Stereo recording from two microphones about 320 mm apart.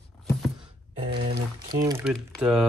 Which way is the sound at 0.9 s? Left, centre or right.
Centre.